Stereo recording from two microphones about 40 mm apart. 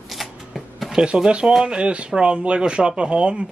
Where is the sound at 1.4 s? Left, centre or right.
Centre.